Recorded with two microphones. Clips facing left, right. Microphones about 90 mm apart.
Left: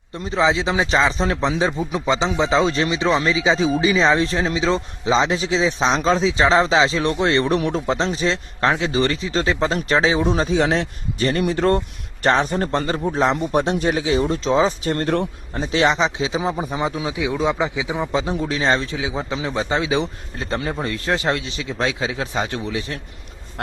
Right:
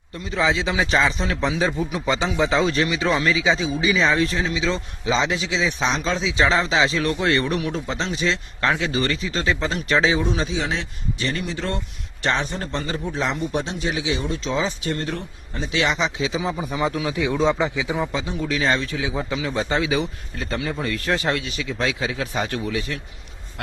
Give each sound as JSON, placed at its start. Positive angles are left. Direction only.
{"t": 0.3, "sound": "speech", "side_deg": 25}
{"t": 10.6, "sound": "speech", "side_deg": 55}
{"t": 13.0, "sound": "speech", "side_deg": 40}
{"t": 15.5, "sound": "speech", "side_deg": 35}
{"t": 16.8, "sound": "speech", "side_deg": 20}
{"t": 18.1, "sound": "speech", "side_deg": 35}